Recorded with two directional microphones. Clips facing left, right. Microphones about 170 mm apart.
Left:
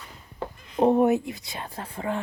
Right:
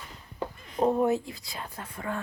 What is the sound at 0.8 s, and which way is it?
Speech, 25° left (ahead or behind).